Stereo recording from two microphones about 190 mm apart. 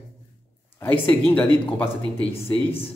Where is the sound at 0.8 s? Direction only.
10° left (ahead or behind).